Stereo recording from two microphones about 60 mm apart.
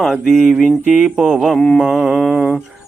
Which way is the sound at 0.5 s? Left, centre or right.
Right.